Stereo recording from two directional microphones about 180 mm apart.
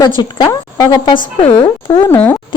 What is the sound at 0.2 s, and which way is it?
Speech, 25° left (ahead or behind).